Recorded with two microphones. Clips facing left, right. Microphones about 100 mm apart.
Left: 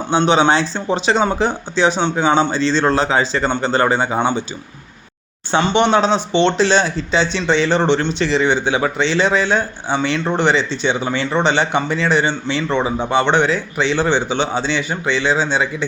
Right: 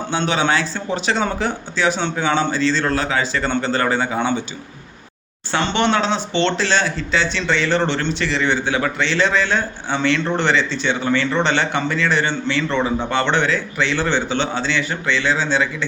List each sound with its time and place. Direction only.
0.1 s speech: 25° left (ahead or behind)
5.5 s speech: 15° left (ahead or behind)